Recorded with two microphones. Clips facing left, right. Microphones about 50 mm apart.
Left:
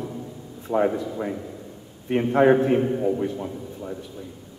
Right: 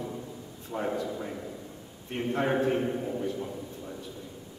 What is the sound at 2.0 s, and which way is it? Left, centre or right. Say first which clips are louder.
A man's voice: left 11 dB; left.